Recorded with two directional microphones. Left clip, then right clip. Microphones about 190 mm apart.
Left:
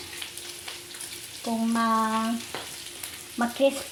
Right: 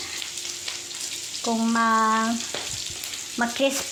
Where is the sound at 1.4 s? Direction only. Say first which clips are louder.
Right 4 dB; 15° right (ahead or behind).